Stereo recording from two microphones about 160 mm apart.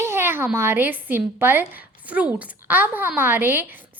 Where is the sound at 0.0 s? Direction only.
15° right (ahead or behind).